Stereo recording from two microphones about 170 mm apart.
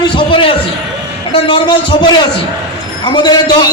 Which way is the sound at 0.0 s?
30° left (ahead or behind).